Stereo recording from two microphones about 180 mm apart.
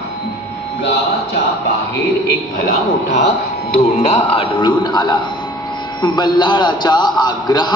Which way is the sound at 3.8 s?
35° left (ahead or behind).